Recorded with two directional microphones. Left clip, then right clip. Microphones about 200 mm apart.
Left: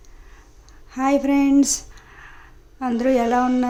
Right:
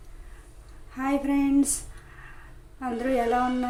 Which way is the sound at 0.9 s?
45° left (ahead or behind).